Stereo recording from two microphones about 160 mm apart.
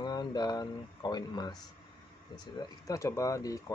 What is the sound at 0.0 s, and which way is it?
Speech, 25° left (ahead or behind).